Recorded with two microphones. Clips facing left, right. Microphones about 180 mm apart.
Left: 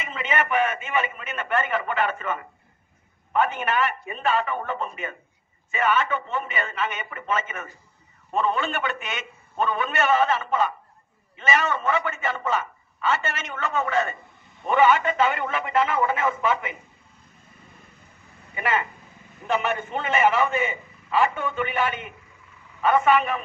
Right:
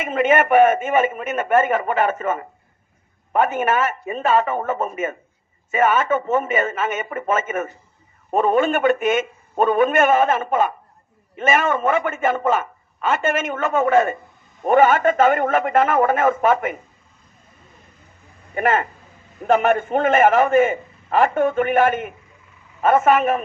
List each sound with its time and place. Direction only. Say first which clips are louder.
0.0 s a man's voice: right 10 dB; 50° right (ahead or behind)
18.5 s a man's voice: right 7 dB; 50° right (ahead or behind)